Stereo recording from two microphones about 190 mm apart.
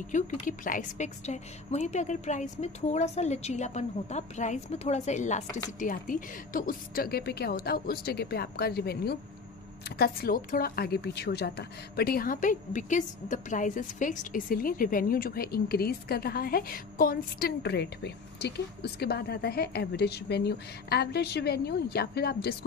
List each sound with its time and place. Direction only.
0.1 s a woman's voice: 45° left (ahead or behind)